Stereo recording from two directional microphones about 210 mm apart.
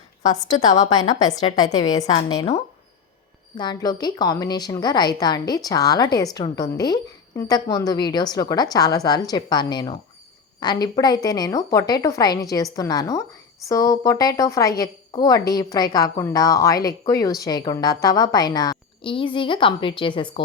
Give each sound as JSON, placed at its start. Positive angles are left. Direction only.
{"t": 1.0, "sound": "a woman's voice", "side_deg": 35}
{"t": 1.5, "sound": "a woman's voice", "side_deg": 20}
{"t": 3.6, "sound": "a woman's voice", "side_deg": 20}